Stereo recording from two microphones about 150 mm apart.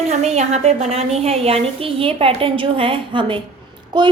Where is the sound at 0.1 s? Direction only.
50° right (ahead or behind).